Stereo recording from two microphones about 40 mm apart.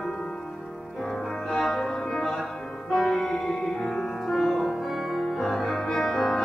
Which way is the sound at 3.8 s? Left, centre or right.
Centre.